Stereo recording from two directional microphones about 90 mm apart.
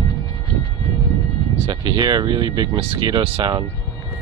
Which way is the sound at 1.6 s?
50° right (ahead or behind).